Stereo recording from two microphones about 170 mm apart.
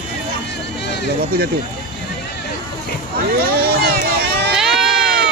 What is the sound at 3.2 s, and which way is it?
Speech, 65° right (ahead or behind).